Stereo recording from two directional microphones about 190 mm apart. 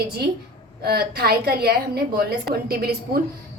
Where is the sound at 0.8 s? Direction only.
55° right (ahead or behind).